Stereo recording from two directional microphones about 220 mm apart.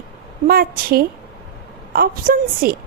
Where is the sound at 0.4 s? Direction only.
40° right (ahead or behind).